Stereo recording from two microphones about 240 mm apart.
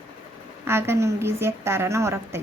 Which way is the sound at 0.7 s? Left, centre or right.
Centre.